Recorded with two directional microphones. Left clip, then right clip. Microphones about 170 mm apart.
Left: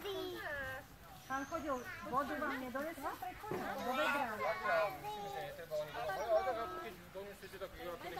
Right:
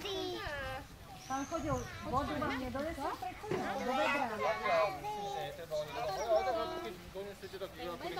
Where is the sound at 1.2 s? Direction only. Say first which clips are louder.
Right 3 dB; 15° left (ahead or behind).